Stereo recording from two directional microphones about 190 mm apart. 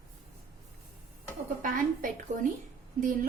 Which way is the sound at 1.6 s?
45° right (ahead or behind).